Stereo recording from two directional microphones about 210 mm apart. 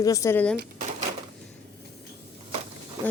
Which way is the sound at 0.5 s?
45° right (ahead or behind).